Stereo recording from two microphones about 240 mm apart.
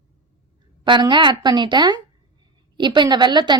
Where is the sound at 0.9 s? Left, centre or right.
Centre.